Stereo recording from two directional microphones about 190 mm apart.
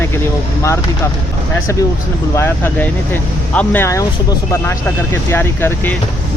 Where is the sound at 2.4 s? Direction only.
10° left (ahead or behind).